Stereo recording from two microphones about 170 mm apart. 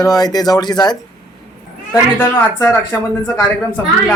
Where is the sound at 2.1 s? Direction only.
10° left (ahead or behind).